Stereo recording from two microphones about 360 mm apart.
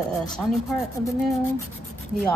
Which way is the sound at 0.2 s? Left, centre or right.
Centre.